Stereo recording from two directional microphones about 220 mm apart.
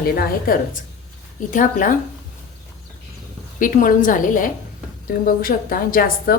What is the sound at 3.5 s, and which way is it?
A woman's voice, 40° left (ahead or behind).